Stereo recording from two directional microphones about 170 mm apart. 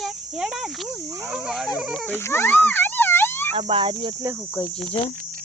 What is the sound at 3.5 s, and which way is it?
Speech, 30° right (ahead or behind).